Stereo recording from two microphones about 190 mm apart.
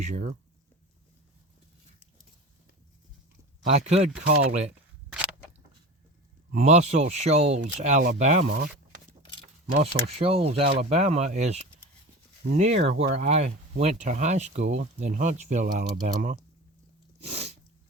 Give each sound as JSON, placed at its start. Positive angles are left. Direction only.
{"t": 0.0, "sound": "speech", "side_deg": -40}
{"t": 3.7, "sound": "speech", "side_deg": -35}
{"t": 5.0, "sound": "a sound", "side_deg": -5}
{"t": 6.5, "sound": "speech", "side_deg": -35}
{"t": 9.6, "sound": "speech", "side_deg": -35}
{"t": 17.2, "sound": "sneeze", "side_deg": -35}